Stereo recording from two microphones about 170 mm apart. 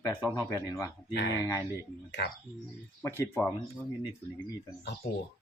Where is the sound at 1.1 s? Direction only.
80° left.